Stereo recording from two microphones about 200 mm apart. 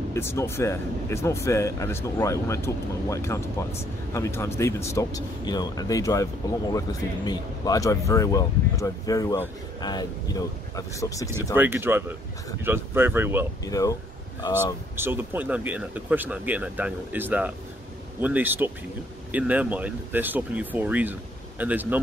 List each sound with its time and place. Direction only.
0.1 s speech: 15° left (ahead or behind)
11.5 s speech: 10° right (ahead or behind)
13.7 s speech: 15° left (ahead or behind)
15.0 s speech: 10° right (ahead or behind)